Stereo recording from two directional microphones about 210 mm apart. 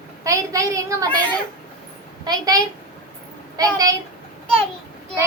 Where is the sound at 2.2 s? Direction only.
20° right (ahead or behind).